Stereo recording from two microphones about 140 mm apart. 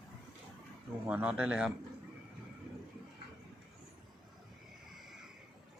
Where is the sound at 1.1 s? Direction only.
10° right (ahead or behind).